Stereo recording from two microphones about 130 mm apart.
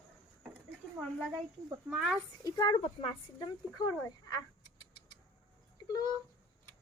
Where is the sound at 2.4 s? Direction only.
30° left (ahead or behind).